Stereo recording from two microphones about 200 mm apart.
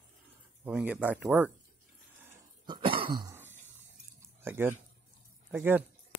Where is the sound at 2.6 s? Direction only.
25° right (ahead or behind).